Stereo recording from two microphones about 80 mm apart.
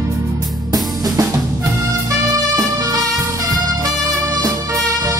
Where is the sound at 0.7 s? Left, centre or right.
Right.